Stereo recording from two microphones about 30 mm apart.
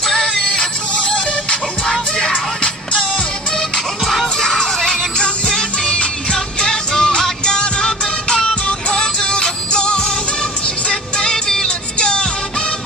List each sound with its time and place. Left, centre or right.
0.3 s music: left
1.9 s music: centre
2.6 s music: left
4.0 s music: centre
4.4 s music: left
5.1 s music: left; by 11.6 s centre
11.6 s music: left